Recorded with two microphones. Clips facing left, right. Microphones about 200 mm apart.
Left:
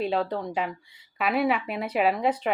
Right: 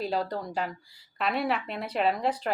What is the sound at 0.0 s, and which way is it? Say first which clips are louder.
Speech: left 3 dB; 5° left (ahead or behind).